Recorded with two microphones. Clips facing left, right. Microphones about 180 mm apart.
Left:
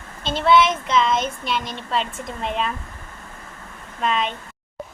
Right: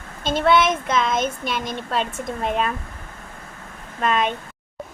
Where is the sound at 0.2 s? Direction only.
50° right (ahead or behind).